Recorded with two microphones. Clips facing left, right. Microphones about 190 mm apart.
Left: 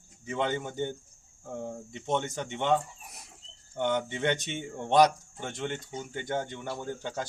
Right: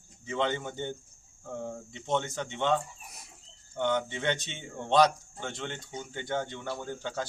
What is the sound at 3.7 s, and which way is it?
Speech, 15° left (ahead or behind).